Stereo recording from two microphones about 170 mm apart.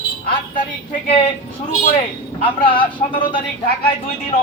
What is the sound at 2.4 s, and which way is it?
A man's voice, 30° left (ahead or behind).